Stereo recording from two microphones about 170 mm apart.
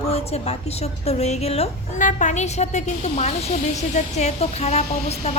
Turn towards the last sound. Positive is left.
turn(degrees=40)  # may be behind; listen again after turning